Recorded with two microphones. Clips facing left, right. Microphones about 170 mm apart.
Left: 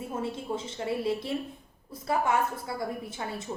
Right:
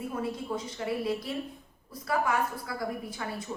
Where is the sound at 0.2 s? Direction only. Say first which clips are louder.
Left 2 dB; 25° left (ahead or behind).